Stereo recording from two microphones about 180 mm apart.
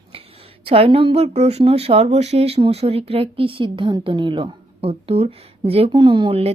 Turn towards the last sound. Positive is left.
turn(degrees=-30)  # may be behind; listen again after turning